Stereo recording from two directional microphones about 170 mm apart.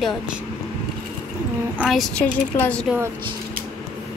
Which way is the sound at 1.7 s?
Centre (ahead or behind).